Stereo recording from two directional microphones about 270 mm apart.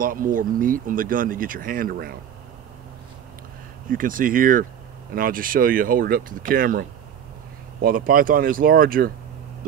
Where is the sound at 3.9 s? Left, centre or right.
Right.